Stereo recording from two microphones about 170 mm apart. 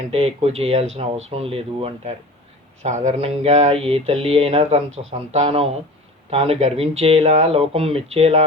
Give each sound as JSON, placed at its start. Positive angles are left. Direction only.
{"t": 0.1, "sound": "speech", "side_deg": -35}
{"t": 2.8, "sound": "speech", "side_deg": -45}